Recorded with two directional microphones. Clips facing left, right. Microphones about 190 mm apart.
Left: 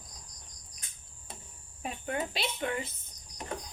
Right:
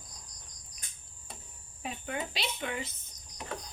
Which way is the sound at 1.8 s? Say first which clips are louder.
Left 2 dB; 45° left (ahead or behind).